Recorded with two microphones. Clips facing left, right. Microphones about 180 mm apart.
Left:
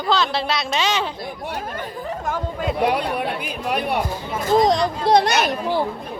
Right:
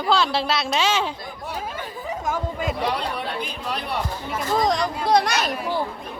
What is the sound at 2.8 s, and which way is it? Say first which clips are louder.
Speech: left 8 dB; 60° left (ahead or behind).